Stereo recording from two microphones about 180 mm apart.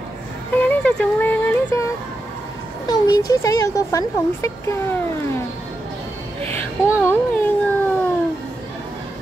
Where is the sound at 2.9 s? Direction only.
20° left (ahead or behind).